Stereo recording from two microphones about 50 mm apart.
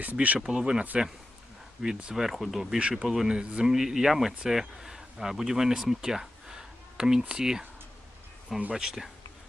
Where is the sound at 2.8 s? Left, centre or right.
Centre.